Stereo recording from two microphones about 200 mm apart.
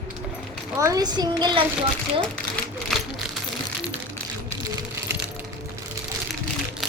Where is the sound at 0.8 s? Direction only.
15° right (ahead or behind).